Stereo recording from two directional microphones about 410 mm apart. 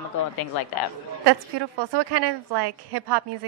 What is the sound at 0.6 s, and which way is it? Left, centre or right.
Speech, left.